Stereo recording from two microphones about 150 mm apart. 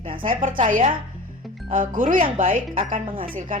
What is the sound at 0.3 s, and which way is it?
Speech, 60° right (ahead or behind).